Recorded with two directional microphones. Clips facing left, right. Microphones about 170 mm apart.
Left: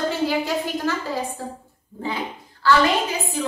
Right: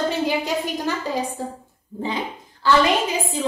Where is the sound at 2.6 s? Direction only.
20° right (ahead or behind).